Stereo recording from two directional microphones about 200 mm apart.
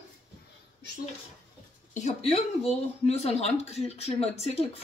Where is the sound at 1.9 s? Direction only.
35° left (ahead or behind).